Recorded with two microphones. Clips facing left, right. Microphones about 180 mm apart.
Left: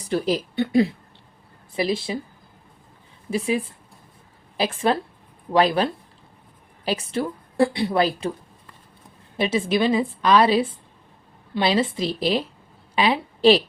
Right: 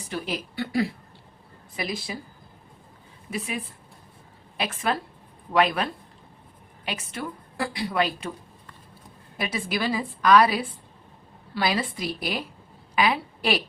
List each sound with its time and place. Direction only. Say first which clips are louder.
0.0 s speech: left 8 dB; 35° left (ahead or behind)
0.5 s a woman's voice: left 5 dB; 20° left (ahead or behind)
3.2 s a woman's voice: left 8 dB; 30° left (ahead or behind)
9.4 s a woman's voice: left 7 dB; 25° left (ahead or behind)